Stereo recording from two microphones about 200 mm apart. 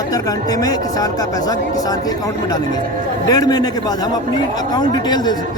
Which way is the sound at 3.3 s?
20° left (ahead or behind).